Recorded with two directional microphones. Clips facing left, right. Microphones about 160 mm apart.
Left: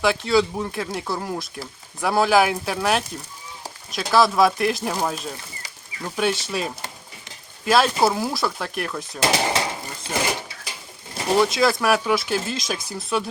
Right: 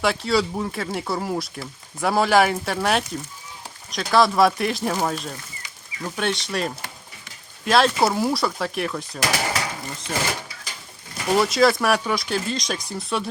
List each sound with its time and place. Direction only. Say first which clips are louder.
0.0 s speech: left 2 dB; centre (ahead or behind)
9.2 s a sound: left 4 dB; 25° left (ahead or behind)
11.1 s pigeon: even; 30° left (ahead or behind)
11.3 s speech: right 1 dB; centre (ahead or behind)